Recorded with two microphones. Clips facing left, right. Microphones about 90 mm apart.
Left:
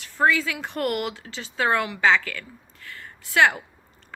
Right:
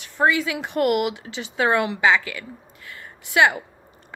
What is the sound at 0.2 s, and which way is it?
Speech, 20° right (ahead or behind).